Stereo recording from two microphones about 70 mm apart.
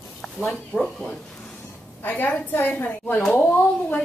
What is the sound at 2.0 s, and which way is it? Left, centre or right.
A woman's voice, left.